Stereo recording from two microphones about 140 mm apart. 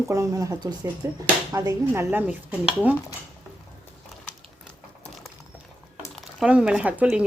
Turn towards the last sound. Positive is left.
turn(degrees=-10)  # may be behind; listen again after turning